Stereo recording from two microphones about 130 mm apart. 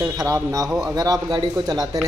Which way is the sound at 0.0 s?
25° right (ahead or behind).